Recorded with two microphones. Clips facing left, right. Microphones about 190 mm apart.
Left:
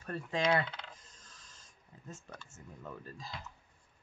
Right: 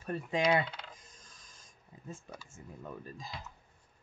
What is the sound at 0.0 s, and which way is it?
Coin, 15° right (ahead or behind).